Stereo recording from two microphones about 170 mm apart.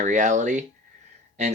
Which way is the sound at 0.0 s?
45° right (ahead or behind).